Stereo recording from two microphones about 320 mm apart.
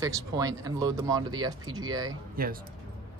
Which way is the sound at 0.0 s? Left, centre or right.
Centre.